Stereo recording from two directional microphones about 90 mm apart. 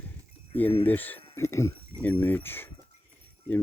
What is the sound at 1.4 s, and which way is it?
Speech, 30° left (ahead or behind).